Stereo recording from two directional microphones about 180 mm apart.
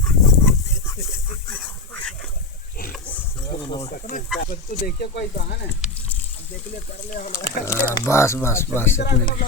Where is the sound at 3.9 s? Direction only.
45° left (ahead or behind).